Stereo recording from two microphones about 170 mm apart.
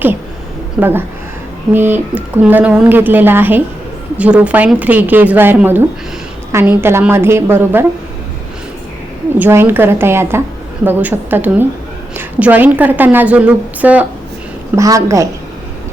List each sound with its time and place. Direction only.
0.8 s a woman's voice: 10° right (ahead or behind)
9.4 s a woman's voice: 15° right (ahead or behind)
14.8 s a woman's voice: 20° right (ahead or behind)